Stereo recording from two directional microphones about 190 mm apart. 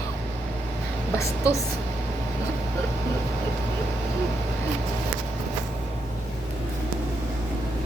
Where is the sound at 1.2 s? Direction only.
15° left (ahead or behind).